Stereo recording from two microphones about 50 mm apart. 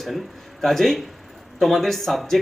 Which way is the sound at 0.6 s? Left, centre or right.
Centre.